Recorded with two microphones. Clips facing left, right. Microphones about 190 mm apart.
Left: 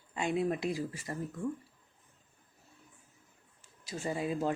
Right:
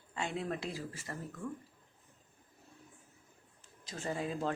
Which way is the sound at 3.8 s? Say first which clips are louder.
Left 3 dB; 10° left (ahead or behind).